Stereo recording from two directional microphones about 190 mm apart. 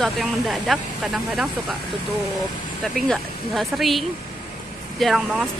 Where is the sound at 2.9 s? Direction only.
Centre (ahead or behind).